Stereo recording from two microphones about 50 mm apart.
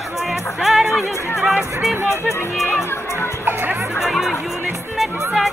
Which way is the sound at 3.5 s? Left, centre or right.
Right.